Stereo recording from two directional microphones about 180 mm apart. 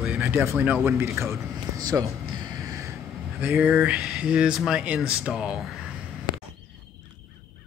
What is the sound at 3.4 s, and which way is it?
Speech, 5° right (ahead or behind).